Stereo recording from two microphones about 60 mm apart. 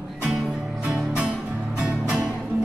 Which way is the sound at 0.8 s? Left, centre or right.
Centre.